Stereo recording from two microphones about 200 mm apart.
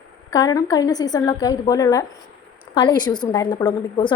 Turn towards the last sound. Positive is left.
turn(degrees=20)  # may be behind; listen again after turning